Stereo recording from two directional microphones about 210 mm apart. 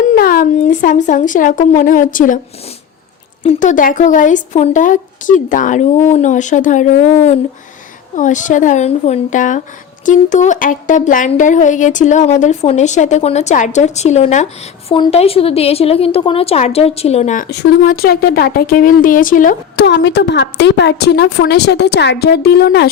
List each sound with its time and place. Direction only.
0.0 s speech: 40° left (ahead or behind)
3.4 s speech: 30° left (ahead or behind)
17.5 s a woman's voice: 50° left (ahead or behind)
19.7 s a woman's voice: 55° left (ahead or behind)